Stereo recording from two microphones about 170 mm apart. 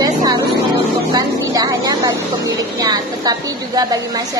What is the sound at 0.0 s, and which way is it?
Vehicle, 20° right (ahead or behind).